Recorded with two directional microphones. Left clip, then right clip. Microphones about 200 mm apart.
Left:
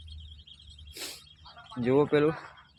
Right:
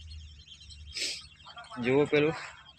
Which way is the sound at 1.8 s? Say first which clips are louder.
Left 1 dB; 20° left (ahead or behind).